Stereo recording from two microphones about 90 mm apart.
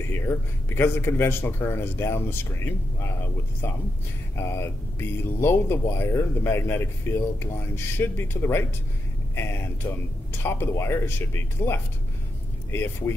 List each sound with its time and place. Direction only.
0.1 s speech: 25° left (ahead or behind)
4.4 s speech: 30° left (ahead or behind)